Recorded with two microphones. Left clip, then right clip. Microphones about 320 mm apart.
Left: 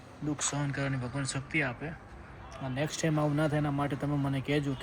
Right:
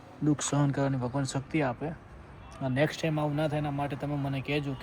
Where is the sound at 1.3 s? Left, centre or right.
Centre.